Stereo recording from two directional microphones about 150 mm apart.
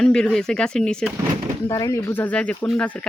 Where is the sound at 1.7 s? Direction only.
20° left (ahead or behind).